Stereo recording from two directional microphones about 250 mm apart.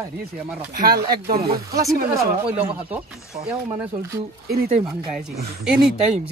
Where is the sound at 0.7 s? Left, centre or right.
Right.